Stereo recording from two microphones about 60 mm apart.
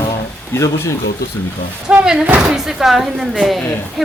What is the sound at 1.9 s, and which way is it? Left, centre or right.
Speech, centre.